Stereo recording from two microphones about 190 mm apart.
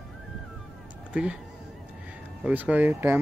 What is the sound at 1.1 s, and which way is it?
Speech, 5° right (ahead or behind).